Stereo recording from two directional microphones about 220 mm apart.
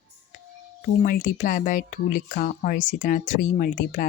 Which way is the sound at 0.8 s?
35° left (ahead or behind).